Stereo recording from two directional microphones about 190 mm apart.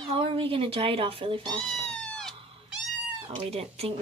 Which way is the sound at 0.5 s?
30° right (ahead or behind).